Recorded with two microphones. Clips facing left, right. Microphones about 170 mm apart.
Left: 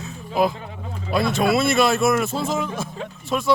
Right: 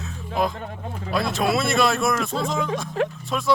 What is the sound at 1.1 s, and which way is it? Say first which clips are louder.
Speech: left 3 dB; centre (ahead or behind).